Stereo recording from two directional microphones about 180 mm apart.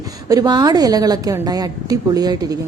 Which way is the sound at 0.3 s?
20° right (ahead or behind).